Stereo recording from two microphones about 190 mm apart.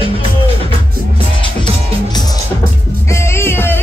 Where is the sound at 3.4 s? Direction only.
10° left (ahead or behind).